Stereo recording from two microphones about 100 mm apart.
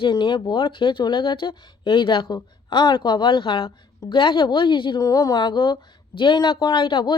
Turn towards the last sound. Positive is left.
turn(degrees=55)  # may be behind; listen again after turning